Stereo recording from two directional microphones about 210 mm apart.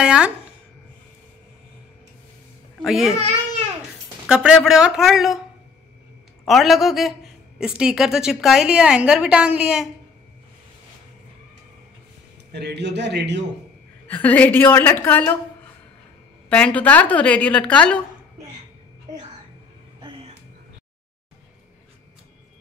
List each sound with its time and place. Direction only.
0.0 s a sound: 5° right (ahead or behind)
2.8 s a woman's voice: centre (ahead or behind)
4.3 s a woman's voice: 5° right (ahead or behind)
6.4 s a woman's voice: centre (ahead or behind)
12.5 s a man's voice: 55° right (ahead or behind)
14.0 s a woman's voice: 5° left (ahead or behind)
16.4 s a woman's voice: 5° left (ahead or behind)
20.0 s a sound: 25° right (ahead or behind)